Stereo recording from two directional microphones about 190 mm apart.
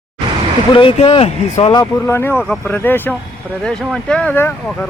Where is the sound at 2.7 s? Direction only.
10° left (ahead or behind).